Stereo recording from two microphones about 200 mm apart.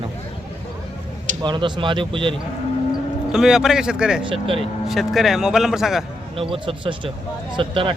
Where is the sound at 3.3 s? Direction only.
Centre (ahead or behind).